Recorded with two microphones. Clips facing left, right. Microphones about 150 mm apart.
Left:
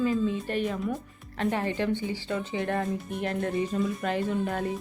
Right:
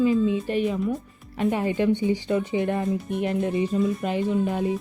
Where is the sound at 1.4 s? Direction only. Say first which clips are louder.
Right 5 dB; 15° right (ahead or behind).